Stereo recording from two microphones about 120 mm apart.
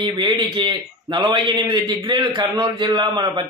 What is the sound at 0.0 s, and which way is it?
A man's voice, 40° right (ahead or behind).